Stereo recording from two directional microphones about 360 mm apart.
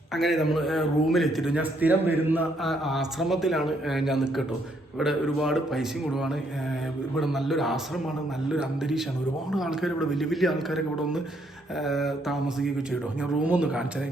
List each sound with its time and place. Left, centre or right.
0.1 s a man's voice: centre